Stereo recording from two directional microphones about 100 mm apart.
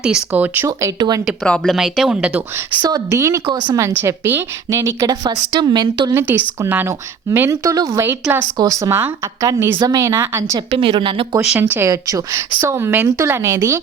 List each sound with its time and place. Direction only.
0.3 s speech: 20° right (ahead or behind)
0.9 s a woman's voice: 45° right (ahead or behind)
1.5 s speech: 10° left (ahead or behind)
1.7 s speech: 5° right (ahead or behind)
2.8 s speech: 35° right (ahead or behind)
5.0 s a woman's voice: 40° right (ahead or behind)
6.1 s speech: 20° right (ahead or behind)
9.7 s speech: 40° right (ahead or behind)
10.7 s a woman's voice: 55° right (ahead or behind)
11.6 s speech: 25° right (ahead or behind)